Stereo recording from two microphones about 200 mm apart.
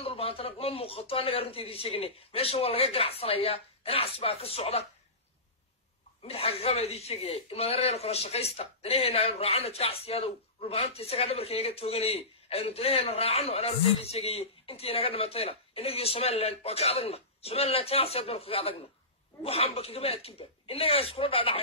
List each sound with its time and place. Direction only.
0.0 s a man's voice: 30° left (ahead or behind)
6.2 s a man's voice: 30° left (ahead or behind)